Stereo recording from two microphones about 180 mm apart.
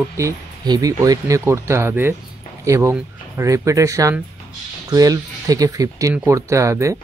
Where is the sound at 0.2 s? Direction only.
20° right (ahead or behind).